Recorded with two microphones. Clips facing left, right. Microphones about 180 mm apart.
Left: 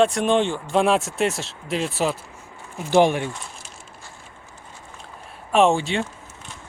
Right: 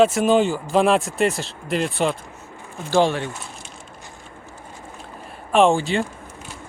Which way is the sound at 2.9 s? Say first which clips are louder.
Left 1 dB; 15° left (ahead or behind).